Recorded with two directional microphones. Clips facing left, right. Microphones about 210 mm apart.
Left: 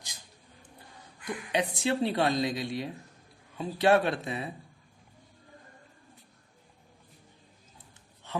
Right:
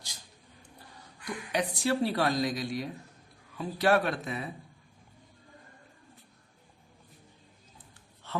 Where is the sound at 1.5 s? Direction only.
25° left (ahead or behind).